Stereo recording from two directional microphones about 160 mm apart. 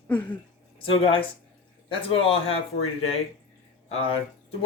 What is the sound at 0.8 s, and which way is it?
Speech, 35° left (ahead or behind).